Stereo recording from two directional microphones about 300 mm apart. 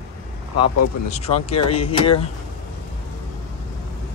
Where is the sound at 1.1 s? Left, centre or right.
Left.